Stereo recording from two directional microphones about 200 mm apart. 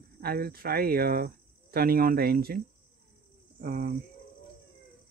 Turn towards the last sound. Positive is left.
turn(degrees=-45)  # may be behind; listen again after turning